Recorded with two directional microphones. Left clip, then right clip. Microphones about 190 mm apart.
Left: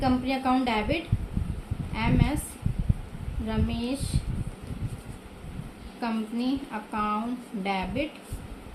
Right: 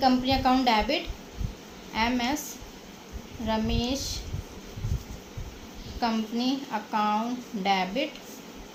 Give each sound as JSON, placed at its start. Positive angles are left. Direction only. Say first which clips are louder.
{"t": 0.0, "sound": "a woman's voice", "louder": "right 3 dB", "side_deg": -30}
{"t": 3.4, "sound": "a woman's voice", "louder": "right 3 dB", "side_deg": -25}
{"t": 6.0, "sound": "a woman's voice", "louder": "right 3 dB", "side_deg": -25}